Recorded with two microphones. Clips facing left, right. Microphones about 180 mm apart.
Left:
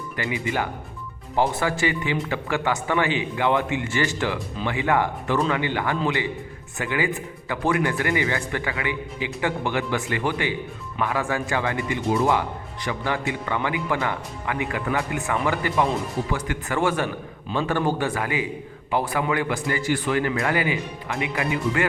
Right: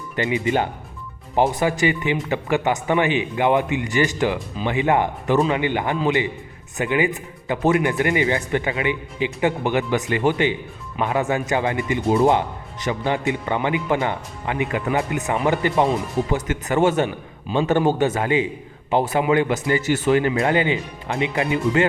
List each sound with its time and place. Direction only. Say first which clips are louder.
0.2 s speech: right 6 dB; 20° right (ahead or behind)